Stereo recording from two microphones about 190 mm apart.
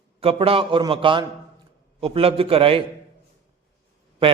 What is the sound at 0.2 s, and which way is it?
A man's voice, 30° right (ahead or behind).